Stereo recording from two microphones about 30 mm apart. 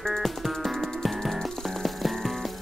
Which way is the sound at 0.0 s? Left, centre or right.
Centre.